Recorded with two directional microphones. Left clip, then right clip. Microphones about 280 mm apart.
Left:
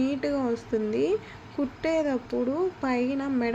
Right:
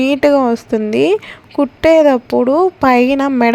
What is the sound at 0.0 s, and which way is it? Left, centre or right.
A woman's voice, right.